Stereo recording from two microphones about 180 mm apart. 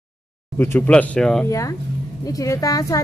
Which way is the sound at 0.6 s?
10° left (ahead or behind).